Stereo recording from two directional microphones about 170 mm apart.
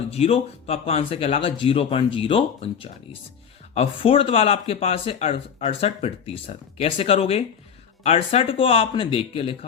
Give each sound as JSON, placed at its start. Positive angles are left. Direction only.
{"t": 0.1, "sound": "speech", "side_deg": 35}